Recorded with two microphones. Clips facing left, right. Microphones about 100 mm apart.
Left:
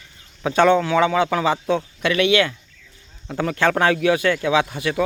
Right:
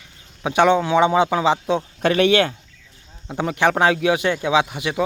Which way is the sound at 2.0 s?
40° right (ahead or behind).